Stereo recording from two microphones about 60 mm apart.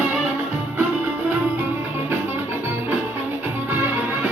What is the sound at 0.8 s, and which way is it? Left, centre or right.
Music, right.